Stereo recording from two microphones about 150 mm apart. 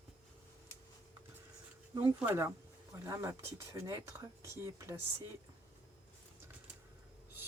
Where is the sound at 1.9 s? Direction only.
15° right (ahead or behind).